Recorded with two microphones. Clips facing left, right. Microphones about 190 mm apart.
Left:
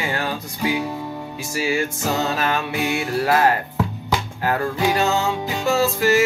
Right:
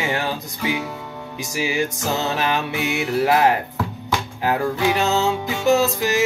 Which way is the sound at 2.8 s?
20° right (ahead or behind).